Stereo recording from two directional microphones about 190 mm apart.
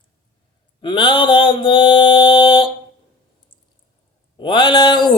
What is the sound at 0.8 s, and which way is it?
Mantra, 25° left (ahead or behind).